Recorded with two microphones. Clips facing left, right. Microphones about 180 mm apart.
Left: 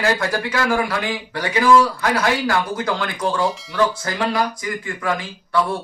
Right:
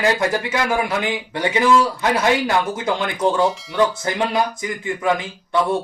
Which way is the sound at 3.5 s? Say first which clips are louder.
Right 1 dB; centre (ahead or behind).